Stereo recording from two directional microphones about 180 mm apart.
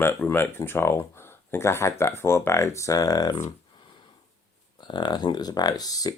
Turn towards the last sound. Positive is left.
turn(degrees=20)  # may be behind; listen again after turning